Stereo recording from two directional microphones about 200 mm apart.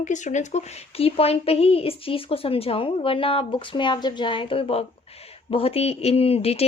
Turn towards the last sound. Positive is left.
turn(degrees=30)  # may be behind; listen again after turning